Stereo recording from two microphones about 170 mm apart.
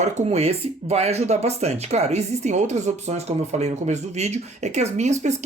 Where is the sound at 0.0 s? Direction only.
35° right (ahead or behind).